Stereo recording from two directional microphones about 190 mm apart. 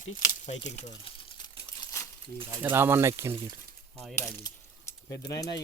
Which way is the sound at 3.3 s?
30° right (ahead or behind).